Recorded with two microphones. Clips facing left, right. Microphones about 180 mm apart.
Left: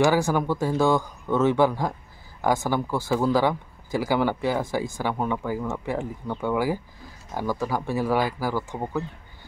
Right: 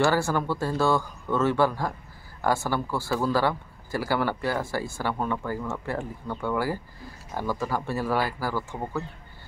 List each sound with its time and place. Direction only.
0.0 s speech: 15° left (ahead or behind)